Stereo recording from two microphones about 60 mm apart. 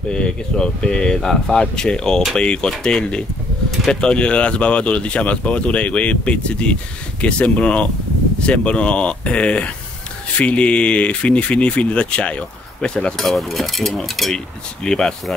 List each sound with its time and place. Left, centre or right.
0.1 s speech: centre
13.2 s speech: centre
14.3 s speech: centre